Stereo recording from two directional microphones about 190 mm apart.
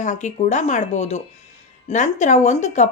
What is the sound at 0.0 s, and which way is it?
Speech, 40° left (ahead or behind).